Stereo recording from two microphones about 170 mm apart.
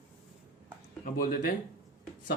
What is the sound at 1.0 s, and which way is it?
Speech, 55° left (ahead or behind).